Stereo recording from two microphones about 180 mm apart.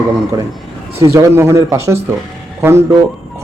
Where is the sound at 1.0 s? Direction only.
15° right (ahead or behind).